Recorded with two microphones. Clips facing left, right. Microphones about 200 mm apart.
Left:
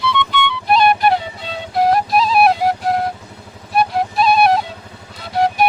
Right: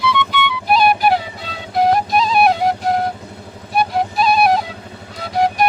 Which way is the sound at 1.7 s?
Centre (ahead or behind).